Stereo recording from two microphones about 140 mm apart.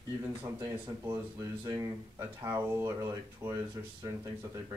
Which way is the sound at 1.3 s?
25° right (ahead or behind).